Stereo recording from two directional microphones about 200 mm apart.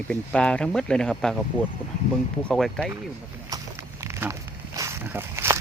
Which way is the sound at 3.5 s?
15° right (ahead or behind).